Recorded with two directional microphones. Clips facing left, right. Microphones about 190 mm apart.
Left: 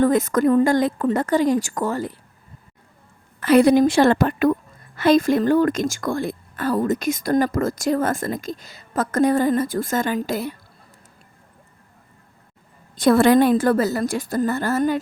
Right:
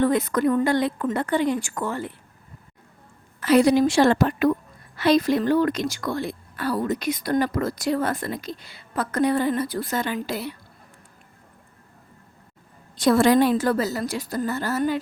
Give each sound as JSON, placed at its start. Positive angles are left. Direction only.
{"t": 0.0, "sound": "a woman's voice", "side_deg": 45}
{"t": 3.4, "sound": "a woman's voice", "side_deg": 55}
{"t": 13.0, "sound": "a woman's voice", "side_deg": 55}